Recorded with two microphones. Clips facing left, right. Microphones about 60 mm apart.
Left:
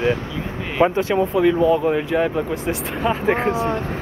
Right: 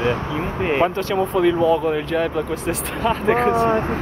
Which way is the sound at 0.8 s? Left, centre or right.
Centre.